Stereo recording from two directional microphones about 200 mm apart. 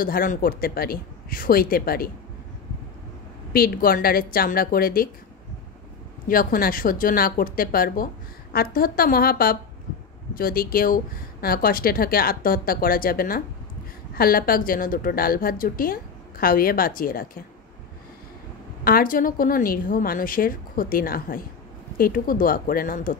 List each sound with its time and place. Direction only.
0.0 s a woman's voice: 45° left (ahead or behind)
3.5 s a woman's voice: 45° left (ahead or behind)
6.2 s a woman's voice: 45° left (ahead or behind)
18.9 s a woman's voice: 45° left (ahead or behind)